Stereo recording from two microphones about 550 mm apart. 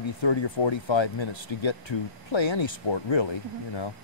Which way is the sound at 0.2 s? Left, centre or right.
Left.